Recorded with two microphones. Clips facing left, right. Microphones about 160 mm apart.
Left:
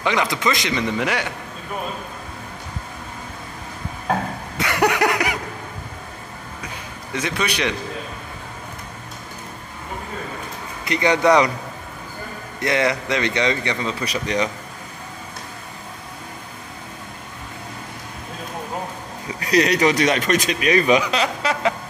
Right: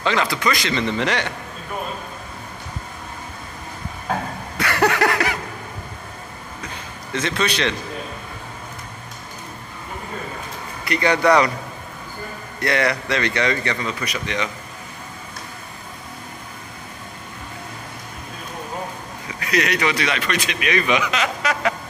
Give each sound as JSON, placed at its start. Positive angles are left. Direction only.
{"t": 0.0, "sound": "a man's voice", "side_deg": 15}
{"t": 4.6, "sound": "a sound", "side_deg": 15}
{"t": 6.6, "sound": "a sound", "side_deg": 10}
{"t": 10.9, "sound": "speech", "side_deg": 20}
{"t": 12.5, "sound": "speech", "side_deg": 20}
{"t": 14.0, "sound": "a man's voice", "side_deg": 35}
{"t": 19.4, "sound": "a man's voice", "side_deg": 35}